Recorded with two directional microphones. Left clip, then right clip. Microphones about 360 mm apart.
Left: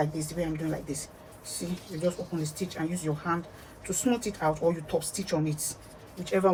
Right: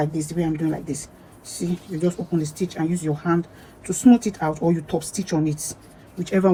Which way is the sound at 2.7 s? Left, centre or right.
Centre.